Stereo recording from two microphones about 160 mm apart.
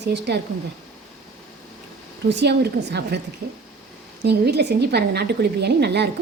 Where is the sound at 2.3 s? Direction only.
90° right.